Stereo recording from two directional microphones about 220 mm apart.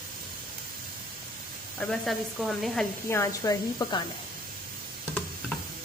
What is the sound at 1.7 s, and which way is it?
Speech, centre (ahead or behind).